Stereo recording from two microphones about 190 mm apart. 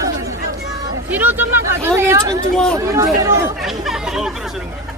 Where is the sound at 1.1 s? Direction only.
10° right (ahead or behind).